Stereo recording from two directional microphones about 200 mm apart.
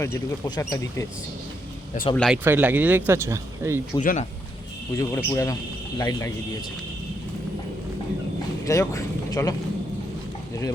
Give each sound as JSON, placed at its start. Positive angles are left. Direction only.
{"t": 0.0, "sound": "speech", "side_deg": 15}
{"t": 2.1, "sound": "speech", "side_deg": 0}
{"t": 2.4, "sound": "speech", "side_deg": -10}
{"t": 4.0, "sound": "speech", "side_deg": 40}
{"t": 4.9, "sound": "speech", "side_deg": 15}
{"t": 8.6, "sound": "speech", "side_deg": 15}